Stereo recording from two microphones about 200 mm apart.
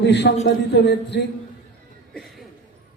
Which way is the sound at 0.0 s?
60° left (ahead or behind).